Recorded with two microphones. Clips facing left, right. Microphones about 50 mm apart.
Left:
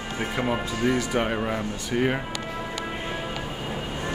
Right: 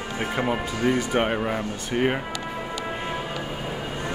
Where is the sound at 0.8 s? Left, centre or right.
Right.